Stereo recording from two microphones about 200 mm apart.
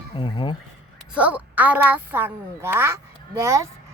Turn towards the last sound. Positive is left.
turn(degrees=-15)  # may be behind; listen again after turning